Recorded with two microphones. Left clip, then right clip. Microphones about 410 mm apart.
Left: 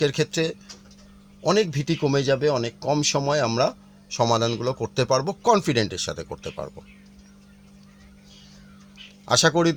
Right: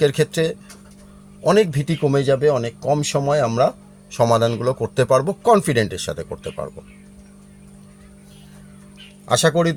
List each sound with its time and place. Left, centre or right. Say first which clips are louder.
0.0 s speech: right 5 dB; left
9.2 s speech: right 2 dB; left